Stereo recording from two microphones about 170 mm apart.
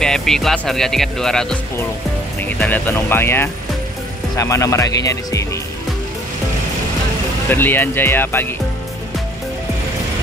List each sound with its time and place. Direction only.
0.0 s speech: 5° left (ahead or behind); by 5.5 s 20° left (ahead or behind)
7.4 s speech: 10° left (ahead or behind)